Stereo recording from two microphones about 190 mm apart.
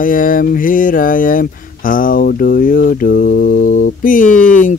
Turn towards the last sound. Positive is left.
turn(degrees=45)  # may be behind; listen again after turning